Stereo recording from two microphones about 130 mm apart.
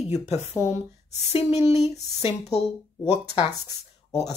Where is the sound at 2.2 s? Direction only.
55° left (ahead or behind).